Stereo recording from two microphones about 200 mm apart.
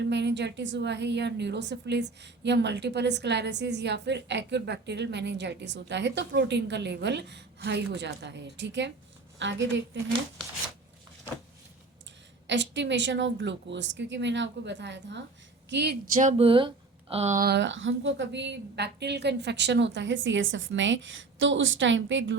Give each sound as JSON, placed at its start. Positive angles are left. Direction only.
{"t": 0.0, "sound": "a woman's voice", "side_deg": -60}
{"t": 12.5, "sound": "a woman's voice", "side_deg": -60}
{"t": 16.1, "sound": "speech", "side_deg": -40}
{"t": 16.5, "sound": "speech", "side_deg": -25}
{"t": 17.5, "sound": "a woman's voice", "side_deg": -65}